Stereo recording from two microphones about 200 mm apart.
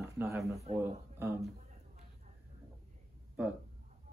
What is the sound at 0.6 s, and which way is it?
Speech, 30° right (ahead or behind).